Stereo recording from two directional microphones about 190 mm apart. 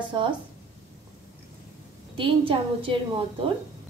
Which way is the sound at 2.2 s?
25° right (ahead or behind).